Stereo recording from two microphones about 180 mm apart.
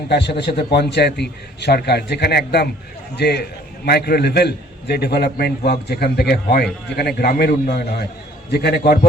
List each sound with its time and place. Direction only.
0.1 s a man's voice: 70° left (ahead or behind)